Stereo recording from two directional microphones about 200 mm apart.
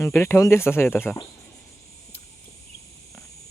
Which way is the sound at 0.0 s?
10° left (ahead or behind).